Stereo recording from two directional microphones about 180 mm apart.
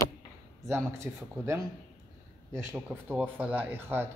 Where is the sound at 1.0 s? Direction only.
15° right (ahead or behind).